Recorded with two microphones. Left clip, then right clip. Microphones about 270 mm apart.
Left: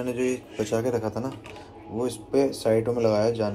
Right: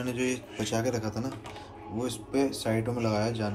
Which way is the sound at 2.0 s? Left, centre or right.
Centre.